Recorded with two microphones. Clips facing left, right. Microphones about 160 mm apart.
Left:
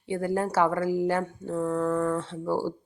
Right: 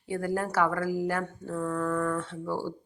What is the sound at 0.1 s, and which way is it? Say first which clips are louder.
Speech: left 3 dB; 25° left (ahead or behind).